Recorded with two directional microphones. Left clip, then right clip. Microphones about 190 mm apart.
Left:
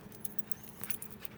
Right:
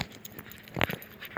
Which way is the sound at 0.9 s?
15° left (ahead or behind).